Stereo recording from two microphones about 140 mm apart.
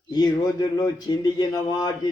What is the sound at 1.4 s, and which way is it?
Speech, 30° left (ahead or behind).